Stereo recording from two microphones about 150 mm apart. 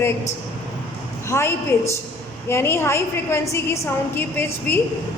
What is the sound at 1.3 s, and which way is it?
A woman's voice, 20° left (ahead or behind).